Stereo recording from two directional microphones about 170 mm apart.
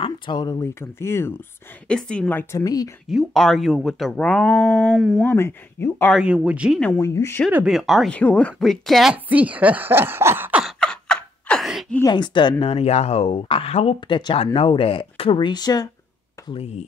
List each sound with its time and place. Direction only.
0.0 s speech: 25° left (ahead or behind)
2.6 s speech: 20° left (ahead or behind)
3.1 s speech: centre (ahead or behind)
5.2 s speech: 15° left (ahead or behind)
6.1 s speech: 5° right (ahead or behind)
6.8 s speech: 5° left (ahead or behind)
7.5 s speech: 5° right (ahead or behind)
10.8 s a sound: 5° left (ahead or behind)
12.1 s speech: 25° left (ahead or behind)
16.4 s speech: 35° left (ahead or behind)